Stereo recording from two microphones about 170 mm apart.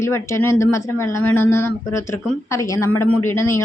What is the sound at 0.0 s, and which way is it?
Speech, 15° left (ahead or behind).